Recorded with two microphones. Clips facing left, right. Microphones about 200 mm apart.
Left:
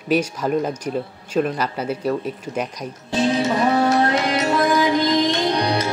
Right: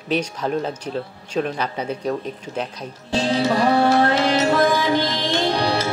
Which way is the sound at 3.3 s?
30° right (ahead or behind).